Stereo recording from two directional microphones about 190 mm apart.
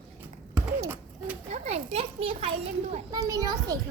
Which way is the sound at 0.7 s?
15° right (ahead or behind).